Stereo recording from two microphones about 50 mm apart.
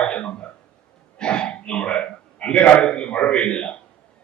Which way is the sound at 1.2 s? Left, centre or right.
Centre.